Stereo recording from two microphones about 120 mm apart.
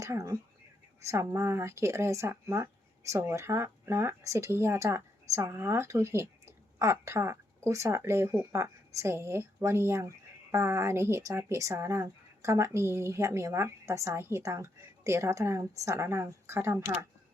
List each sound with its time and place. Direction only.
0.0 s speech: 25° right (ahead or behind)